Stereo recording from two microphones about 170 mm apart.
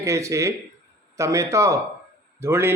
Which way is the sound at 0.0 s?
15° right (ahead or behind).